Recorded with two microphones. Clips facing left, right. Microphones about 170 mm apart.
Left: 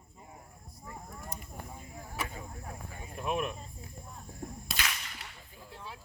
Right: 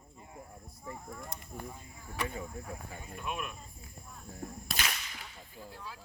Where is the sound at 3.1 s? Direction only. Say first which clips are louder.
Left 7 dB; 35° left (ahead or behind).